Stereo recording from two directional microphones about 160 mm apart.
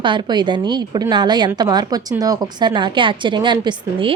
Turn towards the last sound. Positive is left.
turn(degrees=-30)  # may be behind; listen again after turning